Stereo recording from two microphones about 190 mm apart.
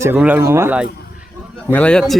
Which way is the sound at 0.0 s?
10° right (ahead or behind).